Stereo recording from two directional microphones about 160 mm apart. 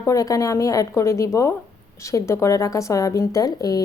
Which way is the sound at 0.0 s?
20° left (ahead or behind).